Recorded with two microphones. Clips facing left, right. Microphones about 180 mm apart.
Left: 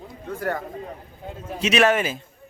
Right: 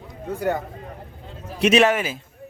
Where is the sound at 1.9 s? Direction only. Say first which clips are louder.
Left 2 dB; 5° right (ahead or behind).